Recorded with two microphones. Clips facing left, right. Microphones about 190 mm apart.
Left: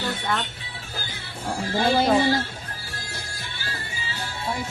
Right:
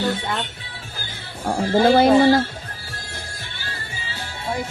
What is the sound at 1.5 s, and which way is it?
Speech, 60° right (ahead or behind).